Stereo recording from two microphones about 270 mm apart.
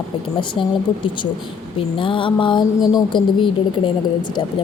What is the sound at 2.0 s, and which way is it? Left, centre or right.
A woman's voice, centre.